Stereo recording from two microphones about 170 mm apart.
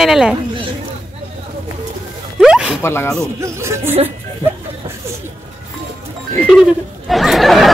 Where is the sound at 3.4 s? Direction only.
15° right (ahead or behind).